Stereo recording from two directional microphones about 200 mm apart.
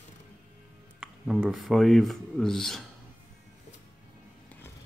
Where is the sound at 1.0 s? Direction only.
5° right (ahead or behind).